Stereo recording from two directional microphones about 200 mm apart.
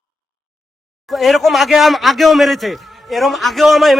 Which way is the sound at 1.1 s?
Centre (ahead or behind).